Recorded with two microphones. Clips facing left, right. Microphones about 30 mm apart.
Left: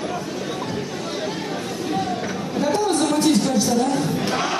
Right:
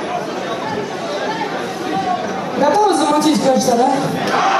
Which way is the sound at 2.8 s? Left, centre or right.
Right.